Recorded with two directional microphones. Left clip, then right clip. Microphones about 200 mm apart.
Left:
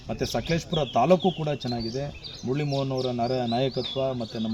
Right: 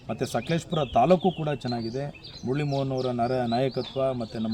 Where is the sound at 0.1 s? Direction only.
Centre (ahead or behind).